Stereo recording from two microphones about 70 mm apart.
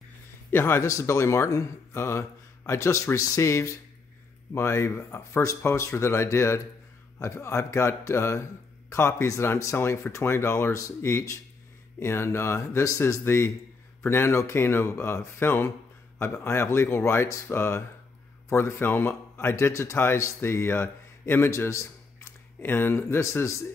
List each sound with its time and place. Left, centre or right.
0.5 s speech: left
0.8 s speech: left
22.7 s speech: left